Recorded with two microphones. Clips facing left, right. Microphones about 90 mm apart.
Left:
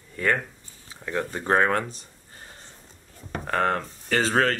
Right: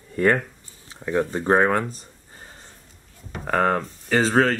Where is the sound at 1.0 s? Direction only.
15° right (ahead or behind).